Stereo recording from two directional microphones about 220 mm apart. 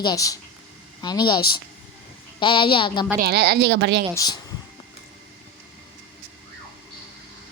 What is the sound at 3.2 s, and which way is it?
Speech, 50° right (ahead or behind).